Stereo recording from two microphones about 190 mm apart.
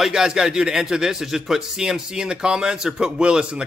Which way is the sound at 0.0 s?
5° right (ahead or behind).